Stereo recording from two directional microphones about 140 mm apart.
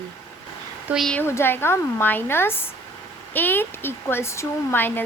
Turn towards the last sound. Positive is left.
turn(degrees=15)  # may be behind; listen again after turning